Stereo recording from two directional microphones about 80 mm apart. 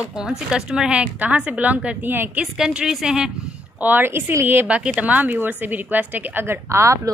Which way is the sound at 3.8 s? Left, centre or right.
Right.